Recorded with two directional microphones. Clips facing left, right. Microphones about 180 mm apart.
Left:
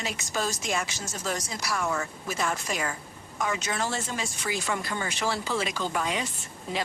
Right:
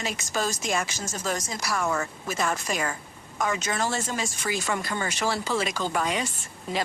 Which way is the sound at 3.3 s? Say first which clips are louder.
Right 2 dB; 45° right (ahead or behind).